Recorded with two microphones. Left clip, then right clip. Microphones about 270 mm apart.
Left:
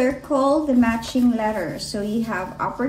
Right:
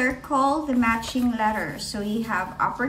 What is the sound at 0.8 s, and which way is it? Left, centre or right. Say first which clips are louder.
Speech: left 2 dB; left.